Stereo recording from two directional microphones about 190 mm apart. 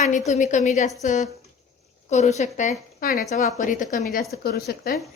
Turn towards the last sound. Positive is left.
turn(degrees=55)  # may be behind; listen again after turning